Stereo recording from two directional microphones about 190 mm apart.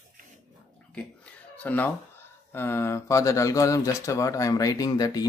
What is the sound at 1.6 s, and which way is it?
Speech, 10° left (ahead or behind).